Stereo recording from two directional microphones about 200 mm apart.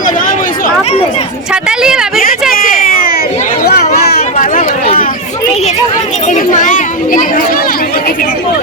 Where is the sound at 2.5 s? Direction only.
45° left (ahead or behind).